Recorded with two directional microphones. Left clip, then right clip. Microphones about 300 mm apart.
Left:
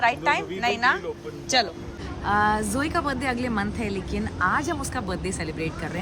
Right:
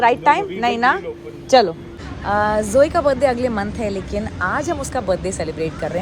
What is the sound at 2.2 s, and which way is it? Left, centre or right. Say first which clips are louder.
A woman's voice: right 4 dB; centre.